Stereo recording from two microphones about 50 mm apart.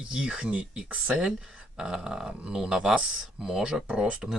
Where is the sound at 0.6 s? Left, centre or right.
Right.